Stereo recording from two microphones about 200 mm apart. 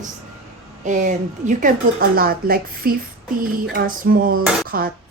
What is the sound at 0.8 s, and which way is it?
Speech, 40° right (ahead or behind).